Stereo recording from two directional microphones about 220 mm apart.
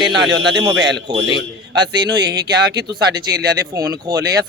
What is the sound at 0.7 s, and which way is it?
Speech, 50° right (ahead or behind).